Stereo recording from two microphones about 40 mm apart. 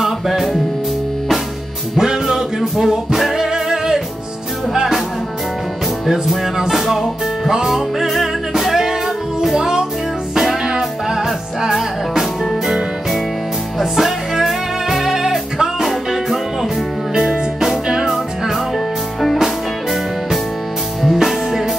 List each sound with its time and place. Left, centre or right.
0.0 s music: centre
2.0 s music: centre
6.0 s music: centre
12.2 s music: centre
13.7 s music: centre
19.3 s music: centre